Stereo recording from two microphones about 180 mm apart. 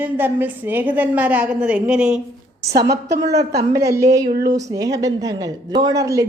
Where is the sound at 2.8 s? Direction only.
20° right (ahead or behind).